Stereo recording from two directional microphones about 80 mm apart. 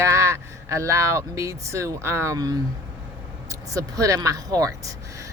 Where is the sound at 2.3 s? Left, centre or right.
Right.